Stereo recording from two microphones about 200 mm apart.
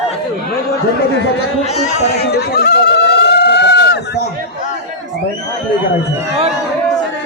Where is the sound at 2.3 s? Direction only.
55° left (ahead or behind).